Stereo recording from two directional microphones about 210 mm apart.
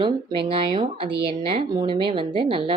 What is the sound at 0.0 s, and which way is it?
A woman's voice, 25° right (ahead or behind).